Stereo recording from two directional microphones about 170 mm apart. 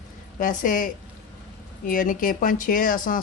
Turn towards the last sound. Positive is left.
turn(degrees=50)  # may be behind; listen again after turning